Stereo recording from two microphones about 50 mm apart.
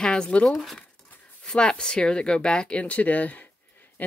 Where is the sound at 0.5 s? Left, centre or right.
Centre.